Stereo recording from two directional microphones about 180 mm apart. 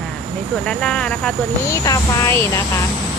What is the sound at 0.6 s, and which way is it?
Speech, 5° left (ahead or behind).